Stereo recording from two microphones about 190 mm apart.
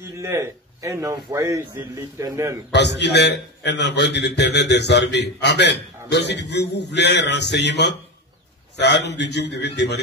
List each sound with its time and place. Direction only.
0.2 s a man's voice: 15° right (ahead or behind)
2.7 s a man's voice: 65° left (ahead or behind)